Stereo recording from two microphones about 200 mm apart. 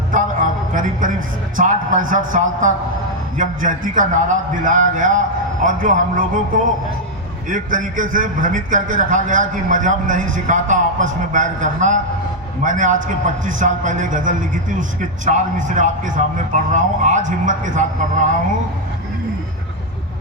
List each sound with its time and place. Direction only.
0.1 s a sound: 40° right (ahead or behind)
1.5 s a man's voice: 40° right (ahead or behind)
7.5 s a man's voice: 40° right (ahead or behind)